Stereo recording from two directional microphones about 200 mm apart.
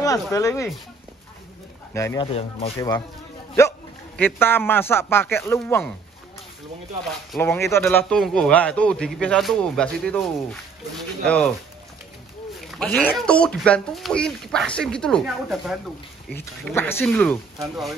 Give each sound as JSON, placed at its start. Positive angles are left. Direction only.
{"t": 0.0, "sound": "speech", "side_deg": 15}
{"t": 2.0, "sound": "speech", "side_deg": 15}
{"t": 4.2, "sound": "speech", "side_deg": 10}
{"t": 7.3, "sound": "speech", "side_deg": 10}
{"t": 8.0, "sound": "speech", "side_deg": 0}
{"t": 12.5, "sound": "a sound", "side_deg": 0}
{"t": 13.2, "sound": "speech", "side_deg": 5}
{"t": 16.3, "sound": "speech", "side_deg": 10}